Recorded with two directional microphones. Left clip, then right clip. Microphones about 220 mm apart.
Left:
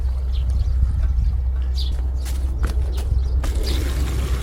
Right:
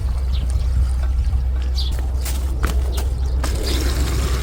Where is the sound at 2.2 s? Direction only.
25° right (ahead or behind).